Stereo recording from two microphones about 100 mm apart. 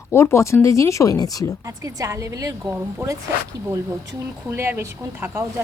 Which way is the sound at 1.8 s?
35° right (ahead or behind).